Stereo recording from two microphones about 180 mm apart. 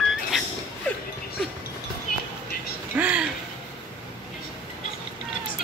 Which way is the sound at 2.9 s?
10° right (ahead or behind).